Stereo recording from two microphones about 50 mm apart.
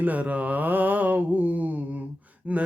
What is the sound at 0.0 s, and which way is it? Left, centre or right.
Mantra, right.